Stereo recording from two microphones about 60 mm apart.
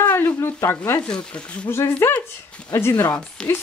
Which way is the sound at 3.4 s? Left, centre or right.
Centre.